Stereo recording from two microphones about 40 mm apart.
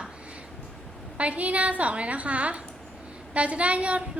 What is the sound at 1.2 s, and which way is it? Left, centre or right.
A woman's voice, right.